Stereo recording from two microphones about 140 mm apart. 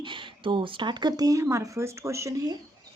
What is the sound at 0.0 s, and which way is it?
Speech, 35° right (ahead or behind).